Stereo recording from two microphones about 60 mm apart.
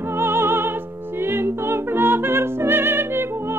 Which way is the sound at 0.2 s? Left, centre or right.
Right.